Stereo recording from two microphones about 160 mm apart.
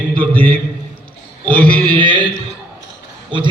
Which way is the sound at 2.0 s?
30° right (ahead or behind).